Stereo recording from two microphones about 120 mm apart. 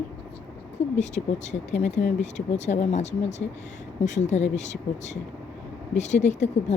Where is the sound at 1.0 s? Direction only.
75° left (ahead or behind).